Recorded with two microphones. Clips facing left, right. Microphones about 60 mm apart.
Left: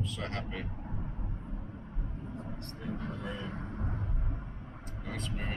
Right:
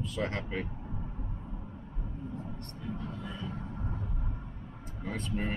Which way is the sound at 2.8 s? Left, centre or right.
Left.